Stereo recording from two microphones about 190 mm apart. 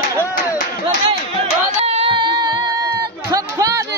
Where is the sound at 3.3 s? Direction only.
15° right (ahead or behind).